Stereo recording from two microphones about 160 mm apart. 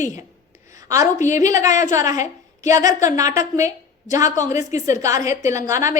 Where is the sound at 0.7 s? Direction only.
20° right (ahead or behind).